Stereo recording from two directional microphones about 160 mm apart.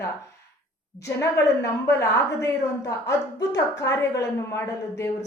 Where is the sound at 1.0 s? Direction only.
15° left (ahead or behind).